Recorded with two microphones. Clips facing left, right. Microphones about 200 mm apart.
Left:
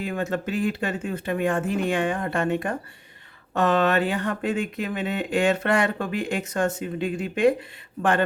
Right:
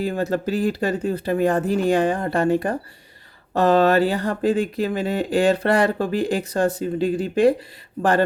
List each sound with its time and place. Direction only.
0.0 s speech: 35° right (ahead or behind)